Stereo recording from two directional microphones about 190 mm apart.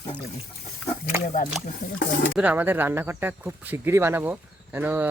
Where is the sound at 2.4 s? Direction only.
10° right (ahead or behind).